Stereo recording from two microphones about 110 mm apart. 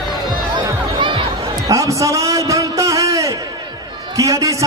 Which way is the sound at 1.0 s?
45° right (ahead or behind).